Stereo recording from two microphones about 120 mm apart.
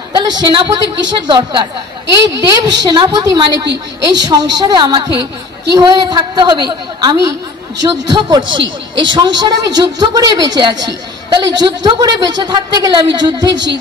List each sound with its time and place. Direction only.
0.3 s a man's voice: 40° right (ahead or behind)
2.2 s a man's voice: 30° right (ahead or behind)